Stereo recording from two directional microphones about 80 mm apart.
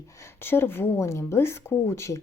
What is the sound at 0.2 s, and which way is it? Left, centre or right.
Speech, left.